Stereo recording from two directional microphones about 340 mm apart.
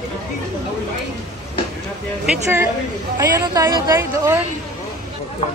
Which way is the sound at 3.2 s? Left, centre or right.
Centre.